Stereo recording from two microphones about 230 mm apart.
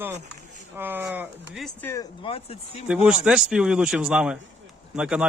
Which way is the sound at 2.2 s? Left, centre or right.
Left.